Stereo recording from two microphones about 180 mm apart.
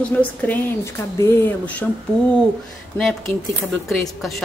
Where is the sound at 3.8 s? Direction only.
Centre (ahead or behind).